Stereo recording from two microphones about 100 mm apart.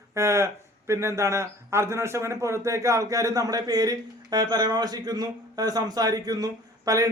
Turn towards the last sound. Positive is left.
turn(degrees=-35)  # may be behind; listen again after turning